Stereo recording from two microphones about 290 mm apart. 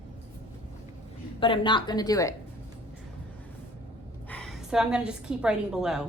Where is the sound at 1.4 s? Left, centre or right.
Centre.